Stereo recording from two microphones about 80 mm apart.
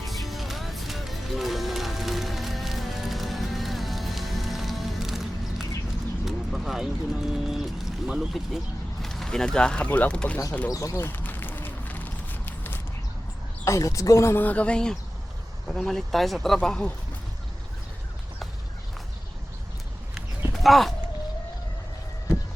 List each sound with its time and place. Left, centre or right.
0.0 s music: centre
6.2 s speech: centre
10.7 s speech: left
10.9 s a sound: left
13.7 s speech: left
14.4 s speech: centre
20.1 s clip-clop: centre